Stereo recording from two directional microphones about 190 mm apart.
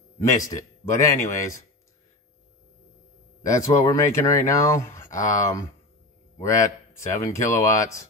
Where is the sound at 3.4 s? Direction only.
15° left (ahead or behind).